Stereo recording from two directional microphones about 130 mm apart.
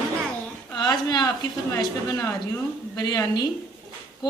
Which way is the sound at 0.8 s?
30° left (ahead or behind).